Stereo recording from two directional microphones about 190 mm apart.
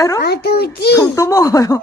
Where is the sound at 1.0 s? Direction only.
15° left (ahead or behind).